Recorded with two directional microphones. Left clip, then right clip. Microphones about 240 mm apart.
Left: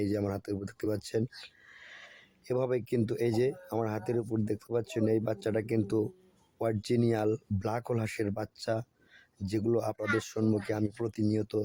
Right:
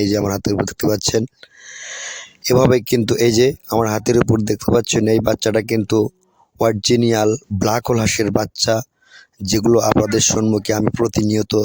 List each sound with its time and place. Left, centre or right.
0.0 s speech: right